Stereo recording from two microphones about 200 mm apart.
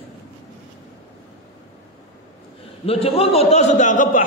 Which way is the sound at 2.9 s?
30° left (ahead or behind).